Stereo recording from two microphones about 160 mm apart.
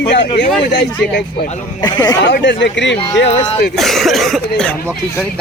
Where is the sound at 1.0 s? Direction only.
75° left (ahead or behind).